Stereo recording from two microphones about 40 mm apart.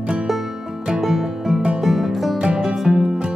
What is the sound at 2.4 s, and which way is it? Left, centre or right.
Music, right.